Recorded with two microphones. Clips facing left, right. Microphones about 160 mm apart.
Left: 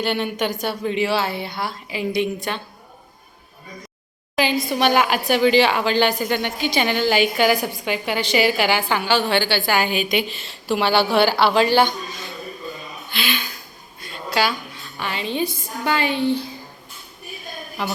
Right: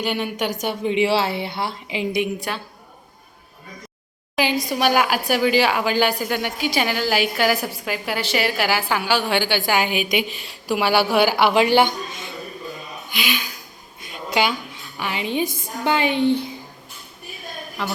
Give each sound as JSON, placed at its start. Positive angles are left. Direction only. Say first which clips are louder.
{"t": 0.0, "sound": "a woman's voice", "louder": "left 1 dB", "side_deg": -10}
{"t": 4.7, "sound": "a woman's voice", "louder": "left 1 dB", "side_deg": -5}
{"t": 13.1, "sound": "speech", "louder": "even", "side_deg": -10}
{"t": 14.0, "sound": "a sound", "louder": "even", "side_deg": -15}
{"t": 14.9, "sound": "a woman's voice", "louder": "right 1 dB", "side_deg": -15}
{"t": 17.8, "sound": "a man's voice", "louder": "left 1 dB", "side_deg": 0}